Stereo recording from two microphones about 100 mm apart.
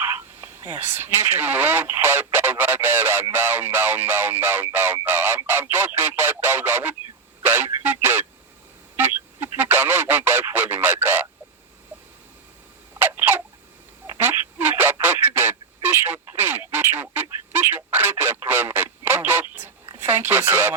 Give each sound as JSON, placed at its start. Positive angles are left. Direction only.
{"t": 0.0, "sound": "speech", "side_deg": -25}
{"t": 5.5, "sound": "fowl", "side_deg": -20}
{"t": 7.4, "sound": "a sound", "side_deg": -20}
{"t": 10.5, "sound": "radio", "side_deg": -20}
{"t": 13.0, "sound": "a sound", "side_deg": -20}
{"t": 15.0, "sound": "telephone", "side_deg": -20}
{"t": 20.0, "sound": "speech", "side_deg": -20}